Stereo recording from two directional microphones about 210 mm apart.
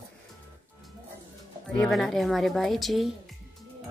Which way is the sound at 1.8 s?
Centre (ahead or behind).